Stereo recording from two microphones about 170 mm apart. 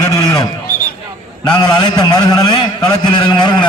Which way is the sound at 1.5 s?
25° left (ahead or behind).